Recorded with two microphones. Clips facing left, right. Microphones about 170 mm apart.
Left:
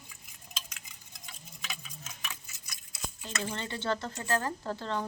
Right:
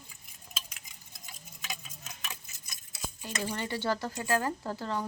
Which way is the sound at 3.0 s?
10° right (ahead or behind).